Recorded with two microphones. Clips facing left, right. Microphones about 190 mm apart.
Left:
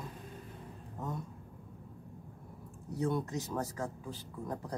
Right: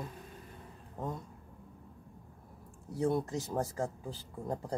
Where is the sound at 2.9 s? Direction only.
30° right (ahead or behind).